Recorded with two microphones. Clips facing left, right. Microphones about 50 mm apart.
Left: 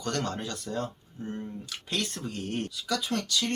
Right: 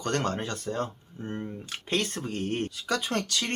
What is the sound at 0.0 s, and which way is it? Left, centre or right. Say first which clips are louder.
Speech: right 3 dB; right.